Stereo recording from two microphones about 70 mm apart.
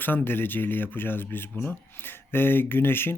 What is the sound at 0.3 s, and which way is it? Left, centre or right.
Speech, left.